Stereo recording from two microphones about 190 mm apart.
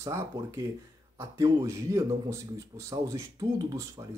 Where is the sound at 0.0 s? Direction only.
15° right (ahead or behind).